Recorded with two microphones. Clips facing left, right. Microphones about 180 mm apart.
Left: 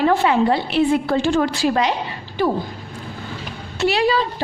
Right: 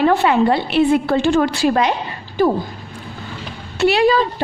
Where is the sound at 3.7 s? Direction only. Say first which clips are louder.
Right 4 dB; 60° right (ahead or behind).